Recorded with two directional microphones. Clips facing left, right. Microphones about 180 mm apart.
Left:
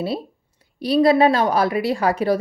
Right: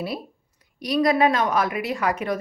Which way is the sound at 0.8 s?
30° left (ahead or behind).